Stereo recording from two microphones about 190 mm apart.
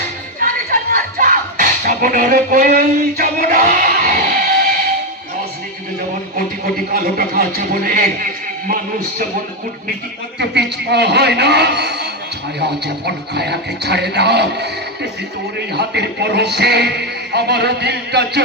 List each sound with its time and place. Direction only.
0.7 s music: 50° right (ahead or behind)
6.3 s a man's voice: 50° right (ahead or behind)
10.4 s a man's voice: 60° right (ahead or behind)